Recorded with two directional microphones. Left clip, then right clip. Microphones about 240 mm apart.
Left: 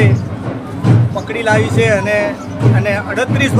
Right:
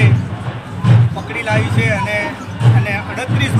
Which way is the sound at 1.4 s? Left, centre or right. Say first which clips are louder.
Left 5 dB; left.